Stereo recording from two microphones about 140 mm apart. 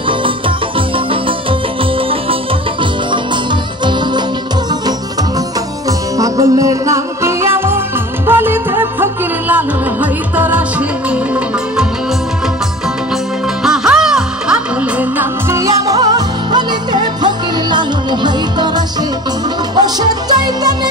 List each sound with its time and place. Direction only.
5.9 s music: 25° right (ahead or behind); by 11.8 s 10° right (ahead or behind)
13.6 s music: 5° right (ahead or behind); by 18.7 s 30° right (ahead or behind)
19.7 s music: 30° right (ahead or behind)